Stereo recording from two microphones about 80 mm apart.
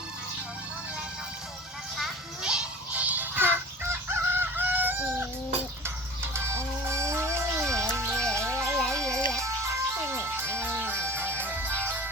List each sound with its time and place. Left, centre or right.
2.0 s music: centre; by 3.6 s right
4.1 s chicken: right
6.3 s music: right
8.0 s music: centre
8.5 s music: right
8.8 s music: centre
9.4 s music: right